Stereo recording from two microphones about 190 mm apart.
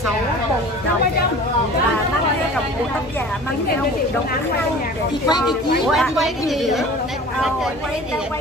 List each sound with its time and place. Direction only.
5.9 s speech: centre (ahead or behind)